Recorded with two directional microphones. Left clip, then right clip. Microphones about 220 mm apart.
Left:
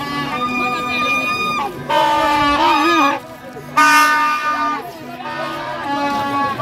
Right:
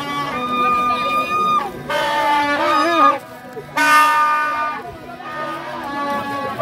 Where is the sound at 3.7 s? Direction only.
50° right (ahead or behind).